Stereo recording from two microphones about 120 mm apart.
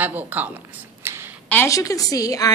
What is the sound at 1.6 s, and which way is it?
Speech, 30° left (ahead or behind).